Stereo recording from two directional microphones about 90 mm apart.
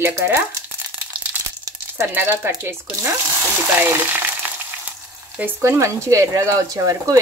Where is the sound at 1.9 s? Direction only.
25° right (ahead or behind).